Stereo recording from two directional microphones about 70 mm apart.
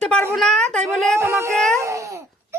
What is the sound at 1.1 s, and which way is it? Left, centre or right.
Speech, right.